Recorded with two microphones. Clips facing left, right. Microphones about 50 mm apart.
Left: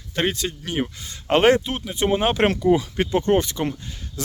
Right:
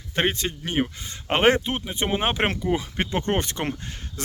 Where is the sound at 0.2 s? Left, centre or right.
Right.